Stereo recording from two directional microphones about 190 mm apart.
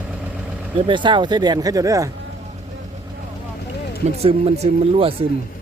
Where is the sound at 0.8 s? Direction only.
25° right (ahead or behind).